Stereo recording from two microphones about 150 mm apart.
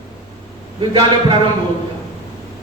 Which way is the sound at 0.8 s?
35° right (ahead or behind).